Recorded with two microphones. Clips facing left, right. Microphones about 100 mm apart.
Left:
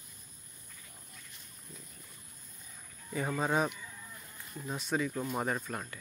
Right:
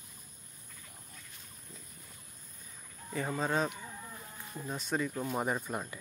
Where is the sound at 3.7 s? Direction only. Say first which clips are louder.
Right 3 dB; 40° right (ahead or behind).